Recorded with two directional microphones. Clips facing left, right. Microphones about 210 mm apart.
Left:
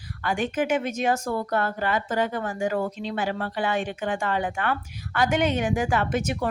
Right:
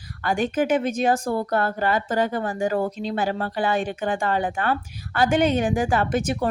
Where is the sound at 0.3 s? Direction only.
35° right (ahead or behind).